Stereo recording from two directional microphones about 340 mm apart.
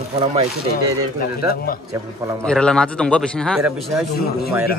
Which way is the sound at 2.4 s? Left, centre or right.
Centre.